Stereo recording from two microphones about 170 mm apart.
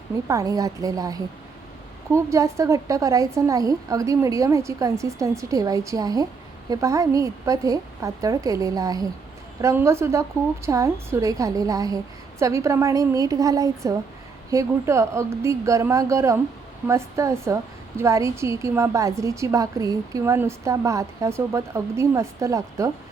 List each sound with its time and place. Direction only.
0.3 s a woman's voice: 20° right (ahead or behind)